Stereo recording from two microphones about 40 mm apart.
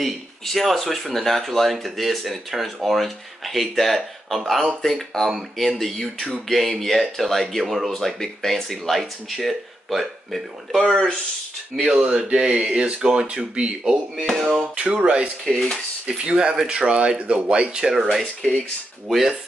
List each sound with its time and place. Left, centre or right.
0.0 s speech: centre
5.3 s speech: centre
5.8 s speech: centre
11.7 s speech: centre
12.0 s speech: right
14.1 s speech: centre
14.8 s speech: right
15.4 s speech: centre
16.1 s speech: right
19.0 s speech: centre